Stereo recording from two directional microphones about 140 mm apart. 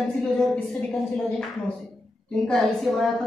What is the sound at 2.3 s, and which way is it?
Speech, centre (ahead or behind).